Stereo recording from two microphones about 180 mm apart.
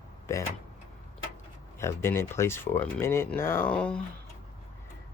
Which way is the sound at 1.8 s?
15° left (ahead or behind).